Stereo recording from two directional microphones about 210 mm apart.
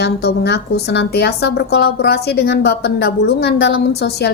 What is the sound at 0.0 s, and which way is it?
Speech, 50° left (ahead or behind).